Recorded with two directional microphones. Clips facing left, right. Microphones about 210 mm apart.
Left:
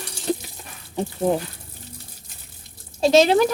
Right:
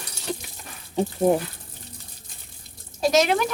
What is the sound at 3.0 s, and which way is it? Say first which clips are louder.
Speech: left 5 dB; 30° left (ahead or behind).